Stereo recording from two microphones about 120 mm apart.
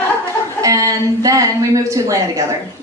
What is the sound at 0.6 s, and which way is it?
A woman's voice, 30° right (ahead or behind).